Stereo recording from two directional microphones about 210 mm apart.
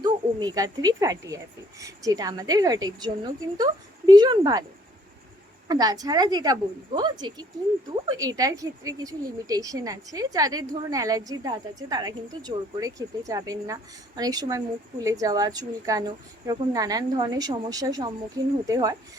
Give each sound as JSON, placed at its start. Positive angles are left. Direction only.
{"t": 0.0, "sound": "speech", "side_deg": -20}
{"t": 5.6, "sound": "a woman's voice", "side_deg": -20}